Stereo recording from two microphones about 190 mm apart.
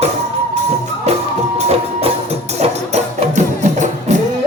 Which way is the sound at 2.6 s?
40° right (ahead or behind).